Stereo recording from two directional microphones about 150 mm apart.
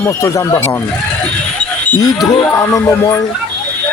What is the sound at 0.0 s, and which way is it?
Music, 20° left (ahead or behind).